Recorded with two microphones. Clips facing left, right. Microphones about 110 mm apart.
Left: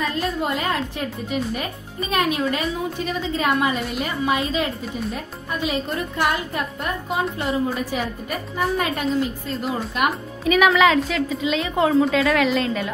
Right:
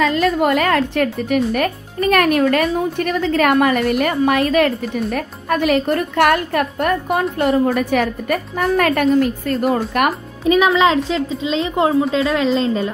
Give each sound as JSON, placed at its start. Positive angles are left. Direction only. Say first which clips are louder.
{"t": 0.0, "sound": "a woman's voice", "louder": "right 8 dB", "side_deg": -85}
{"t": 10.4, "sound": "a woman's voice", "louder": "right 3 dB", "side_deg": -25}